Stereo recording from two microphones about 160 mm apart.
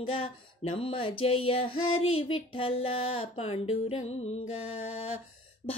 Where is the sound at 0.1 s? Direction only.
35° left (ahead or behind).